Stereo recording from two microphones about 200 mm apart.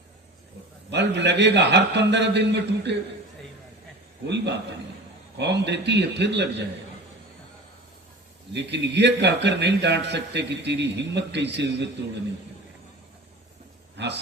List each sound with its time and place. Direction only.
0.9 s a man's voice: 60° right (ahead or behind)
4.3 s a man's voice: 60° right (ahead or behind)
8.5 s a man's voice: 60° right (ahead or behind)
13.9 s a man's voice: 60° right (ahead or behind)